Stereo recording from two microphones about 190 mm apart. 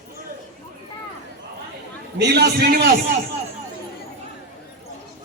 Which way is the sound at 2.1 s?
60° right (ahead or behind).